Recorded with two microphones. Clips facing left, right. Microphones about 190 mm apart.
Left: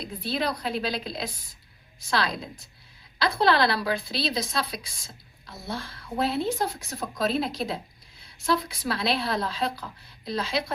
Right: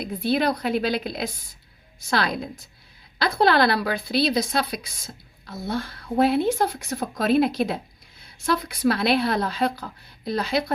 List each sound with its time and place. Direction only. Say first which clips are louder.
0.0 s a woman's voice: right 6 dB; 55° right (ahead or behind)